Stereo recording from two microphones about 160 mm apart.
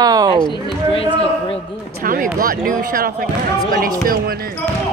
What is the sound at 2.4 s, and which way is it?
Speech, 60° right (ahead or behind).